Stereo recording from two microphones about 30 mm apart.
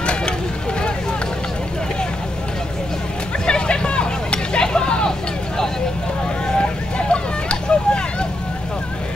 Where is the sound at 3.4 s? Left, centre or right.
Left.